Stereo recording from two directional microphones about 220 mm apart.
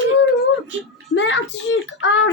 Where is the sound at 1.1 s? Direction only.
55° left (ahead or behind).